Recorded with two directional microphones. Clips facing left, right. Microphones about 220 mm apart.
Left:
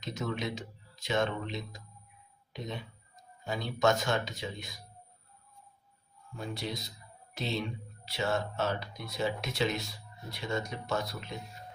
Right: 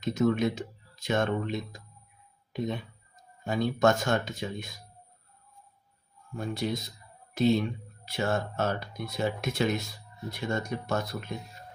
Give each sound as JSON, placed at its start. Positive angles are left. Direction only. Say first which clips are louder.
{"t": 0.0, "sound": "speech", "louder": "right 10 dB", "side_deg": -45}
{"t": 6.3, "sound": "speech", "louder": "right 6 dB", "side_deg": -50}